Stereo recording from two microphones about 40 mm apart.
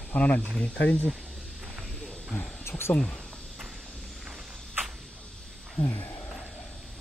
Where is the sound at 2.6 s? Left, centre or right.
Left.